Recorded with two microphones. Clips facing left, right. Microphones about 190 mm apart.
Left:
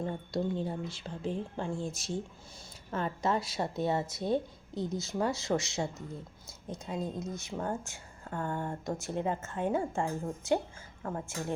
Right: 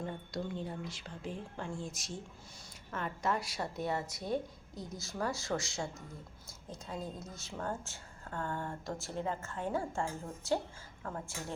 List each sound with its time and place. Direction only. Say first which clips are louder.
0.3 s a woman's voice: left 7 dB; 30° left (ahead or behind)